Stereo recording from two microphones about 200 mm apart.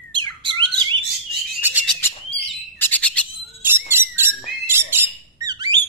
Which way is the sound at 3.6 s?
10° right (ahead or behind).